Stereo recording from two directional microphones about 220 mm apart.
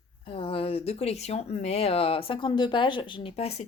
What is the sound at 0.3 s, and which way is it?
Speech, 25° left (ahead or behind).